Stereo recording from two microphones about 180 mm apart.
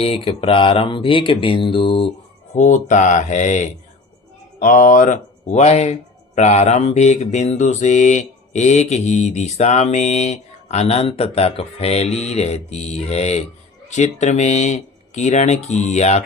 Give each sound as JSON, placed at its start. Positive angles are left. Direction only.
{"t": 0.0, "sound": "speech", "side_deg": 30}
{"t": 2.6, "sound": "speech", "side_deg": 45}